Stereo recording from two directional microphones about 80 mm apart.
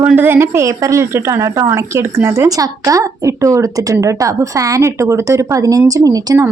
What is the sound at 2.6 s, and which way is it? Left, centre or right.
A woman's voice, right.